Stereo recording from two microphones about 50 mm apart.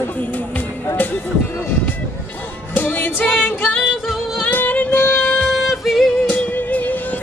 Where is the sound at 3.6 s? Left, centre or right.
Left.